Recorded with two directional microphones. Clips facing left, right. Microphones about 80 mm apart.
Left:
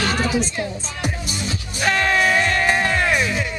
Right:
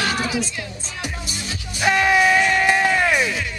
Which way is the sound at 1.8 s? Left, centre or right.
Centre.